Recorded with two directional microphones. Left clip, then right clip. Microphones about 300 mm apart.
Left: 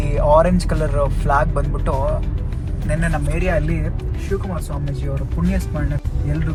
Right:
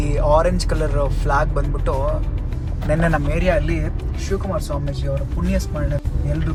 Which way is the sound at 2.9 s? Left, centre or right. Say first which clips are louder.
Right 4 dB; centre.